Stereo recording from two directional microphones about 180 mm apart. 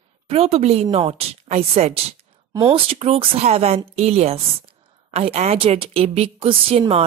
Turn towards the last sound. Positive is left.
turn(degrees=-30)  # may be behind; listen again after turning